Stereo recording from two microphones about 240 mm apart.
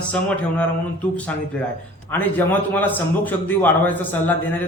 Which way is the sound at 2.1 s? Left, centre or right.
Centre.